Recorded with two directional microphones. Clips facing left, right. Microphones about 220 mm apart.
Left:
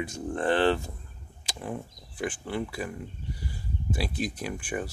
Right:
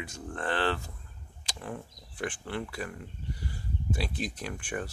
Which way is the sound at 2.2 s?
5° left (ahead or behind).